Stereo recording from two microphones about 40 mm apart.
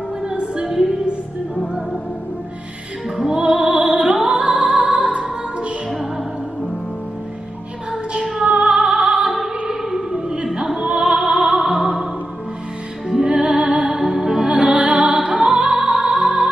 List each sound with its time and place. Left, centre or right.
0.2 s music: right
3.3 s music: centre
3.6 s music: right
4.4 s music: right
7.9 s music: right
9.3 s music: centre
13.1 s music: right
14.5 s music: right